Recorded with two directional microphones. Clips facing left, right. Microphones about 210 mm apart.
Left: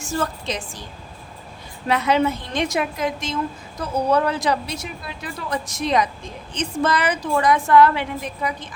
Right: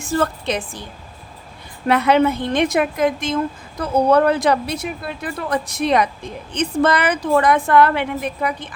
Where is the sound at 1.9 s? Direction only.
60° right (ahead or behind).